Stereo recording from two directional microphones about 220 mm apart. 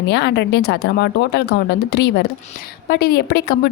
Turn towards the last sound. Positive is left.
turn(degrees=45)  # may be behind; listen again after turning